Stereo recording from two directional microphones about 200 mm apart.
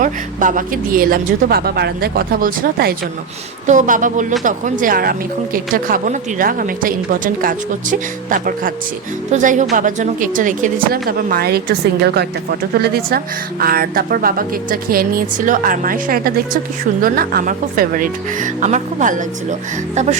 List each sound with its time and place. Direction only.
0.0 s speech: 40° right (ahead or behind)